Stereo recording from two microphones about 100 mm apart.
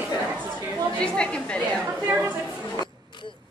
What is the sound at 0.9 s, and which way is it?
Speech, 10° left (ahead or behind).